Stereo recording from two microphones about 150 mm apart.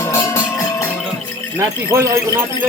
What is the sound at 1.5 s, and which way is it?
Speech, 20° right (ahead or behind).